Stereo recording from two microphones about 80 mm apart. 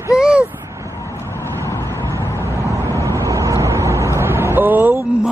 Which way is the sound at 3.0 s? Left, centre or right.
Right.